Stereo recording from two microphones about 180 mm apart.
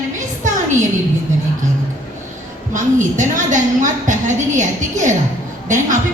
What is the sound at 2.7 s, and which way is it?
A woman's voice, 45° right (ahead or behind).